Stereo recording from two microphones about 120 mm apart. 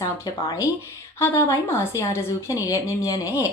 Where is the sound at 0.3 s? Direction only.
35° left (ahead or behind).